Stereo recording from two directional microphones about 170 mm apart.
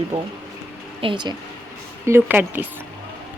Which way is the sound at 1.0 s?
25° right (ahead or behind).